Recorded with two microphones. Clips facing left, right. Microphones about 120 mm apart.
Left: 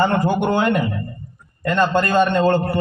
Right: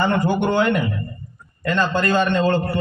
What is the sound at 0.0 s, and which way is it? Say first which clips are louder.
A man's voice: left 1 dB; 35° left (ahead or behind).